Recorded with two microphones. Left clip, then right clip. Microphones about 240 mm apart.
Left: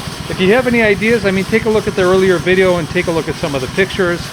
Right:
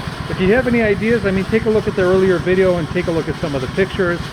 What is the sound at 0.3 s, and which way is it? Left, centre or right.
Speech, left.